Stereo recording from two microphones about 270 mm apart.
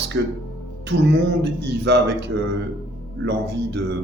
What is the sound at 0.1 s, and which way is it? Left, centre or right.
A man's voice, right.